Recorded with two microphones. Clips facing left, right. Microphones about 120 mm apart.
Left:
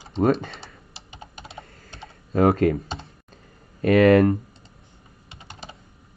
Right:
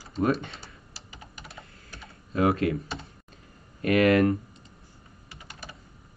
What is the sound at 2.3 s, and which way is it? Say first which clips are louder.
Speech: left 5 dB; 40° left (ahead or behind).